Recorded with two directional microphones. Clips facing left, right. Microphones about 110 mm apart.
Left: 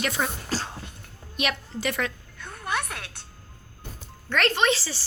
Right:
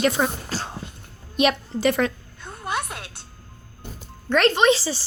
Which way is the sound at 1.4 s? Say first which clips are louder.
Right 8 dB; 30° right (ahead or behind).